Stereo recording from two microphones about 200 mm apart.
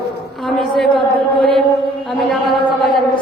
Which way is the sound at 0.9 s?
25° left (ahead or behind).